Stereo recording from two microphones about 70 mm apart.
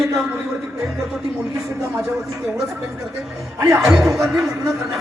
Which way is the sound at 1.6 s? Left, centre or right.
Right.